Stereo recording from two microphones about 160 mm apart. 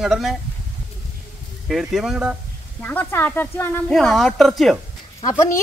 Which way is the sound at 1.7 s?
Centre (ahead or behind).